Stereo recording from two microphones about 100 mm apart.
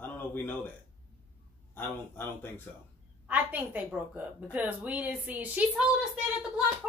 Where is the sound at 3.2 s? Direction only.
15° right (ahead or behind).